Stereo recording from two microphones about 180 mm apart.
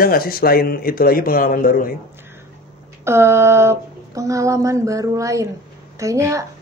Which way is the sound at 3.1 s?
15° right (ahead or behind).